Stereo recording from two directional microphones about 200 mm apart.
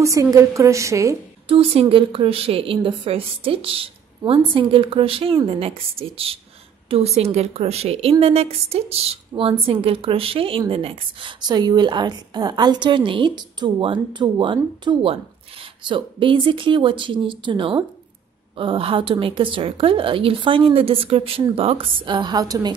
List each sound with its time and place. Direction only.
0.0 s a woman's voice: 15° right (ahead or behind)
1.5 s speech: 30° right (ahead or behind)